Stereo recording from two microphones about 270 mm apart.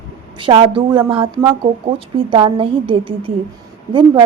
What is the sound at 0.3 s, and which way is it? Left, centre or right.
A woman's voice, centre.